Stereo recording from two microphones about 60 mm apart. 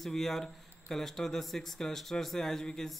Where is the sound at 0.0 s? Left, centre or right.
Centre.